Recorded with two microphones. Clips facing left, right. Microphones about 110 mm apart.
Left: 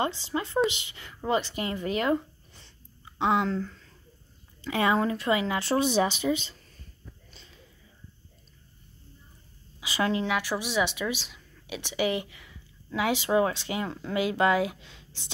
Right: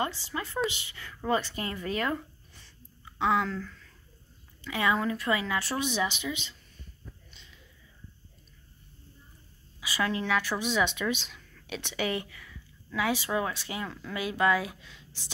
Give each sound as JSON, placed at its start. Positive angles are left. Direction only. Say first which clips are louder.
{"t": 0.0, "sound": "speech", "louder": "left 3 dB", "side_deg": 25}
{"t": 7.3, "sound": "a sound", "louder": "left 3 dB", "side_deg": 40}
{"t": 9.8, "sound": "a woman's voice", "louder": "left 3 dB", "side_deg": 25}